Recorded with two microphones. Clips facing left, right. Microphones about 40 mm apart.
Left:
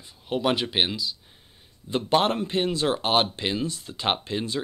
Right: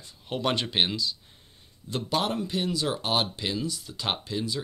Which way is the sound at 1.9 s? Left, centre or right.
Left.